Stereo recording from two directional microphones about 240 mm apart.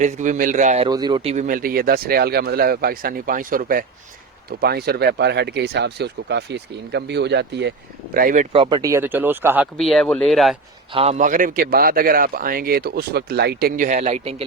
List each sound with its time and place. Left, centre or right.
0.0 s speech: right
0.9 s speech: centre; by 7.7 s right
8.1 s speech: right
8.5 s speech: centre
10.9 s speech: right